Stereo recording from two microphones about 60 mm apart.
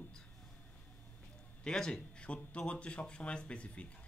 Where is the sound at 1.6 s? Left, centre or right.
Centre.